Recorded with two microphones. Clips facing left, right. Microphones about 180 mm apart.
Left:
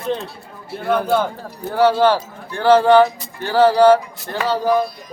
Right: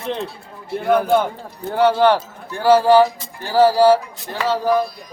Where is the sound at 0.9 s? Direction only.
10° right (ahead or behind).